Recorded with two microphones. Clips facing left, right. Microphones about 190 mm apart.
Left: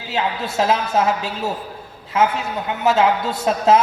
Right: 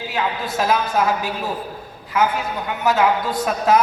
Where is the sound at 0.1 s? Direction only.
25° left (ahead or behind).